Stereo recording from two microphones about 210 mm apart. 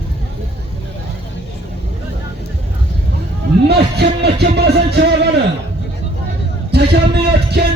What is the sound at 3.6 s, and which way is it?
Music, 50° right (ahead or behind).